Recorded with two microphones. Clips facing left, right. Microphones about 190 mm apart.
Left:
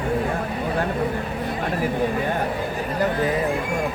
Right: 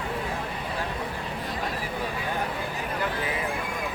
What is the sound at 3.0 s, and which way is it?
Speech, 40° left (ahead or behind).